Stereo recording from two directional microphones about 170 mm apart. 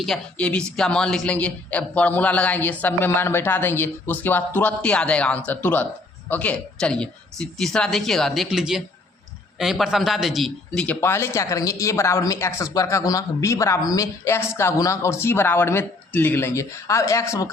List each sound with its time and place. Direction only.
0.0 s speech: 5° left (ahead or behind)